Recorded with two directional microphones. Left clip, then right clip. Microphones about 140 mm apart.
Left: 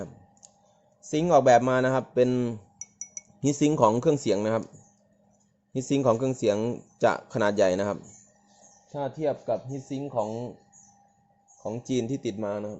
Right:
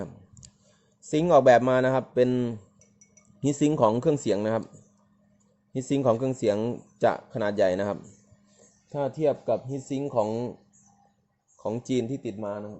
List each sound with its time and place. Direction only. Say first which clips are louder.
0.0 s clicking: right 1 dB; 30° right (ahead or behind)
1.1 s a man's voice: right 1 dB; 15° right (ahead or behind)
5.7 s speech: even; centre (ahead or behind)
7.3 s speech: left 1 dB; 15° left (ahead or behind)
8.9 s speech: right 3 dB; 45° right (ahead or behind)
12.0 s speech: left 2 dB; 15° left (ahead or behind)
12.5 s a man's voice: left 2 dB; 30° left (ahead or behind)